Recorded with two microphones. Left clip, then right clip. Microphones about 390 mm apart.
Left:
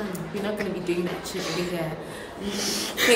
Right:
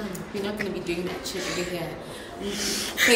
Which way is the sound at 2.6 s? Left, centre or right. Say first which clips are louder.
Right 1 dB; centre.